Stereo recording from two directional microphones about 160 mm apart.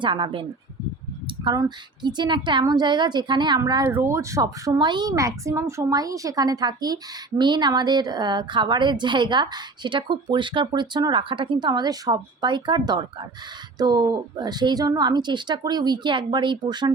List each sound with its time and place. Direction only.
0.0 s speech: 30° right (ahead or behind)
1.5 s speech: 30° right (ahead or behind)